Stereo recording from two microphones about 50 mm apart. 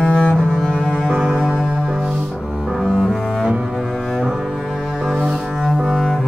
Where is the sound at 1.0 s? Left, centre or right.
Right.